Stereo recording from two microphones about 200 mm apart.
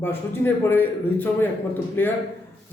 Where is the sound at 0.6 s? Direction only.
10° left (ahead or behind).